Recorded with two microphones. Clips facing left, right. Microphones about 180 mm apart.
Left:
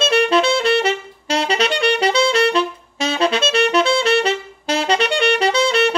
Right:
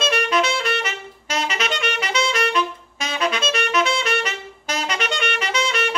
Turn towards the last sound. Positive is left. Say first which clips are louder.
# left 7 dB
turn(degrees=30)  # may be behind; listen again after turning